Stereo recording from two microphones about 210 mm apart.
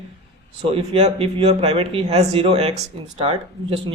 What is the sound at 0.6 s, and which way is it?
Speech, 25° right (ahead or behind).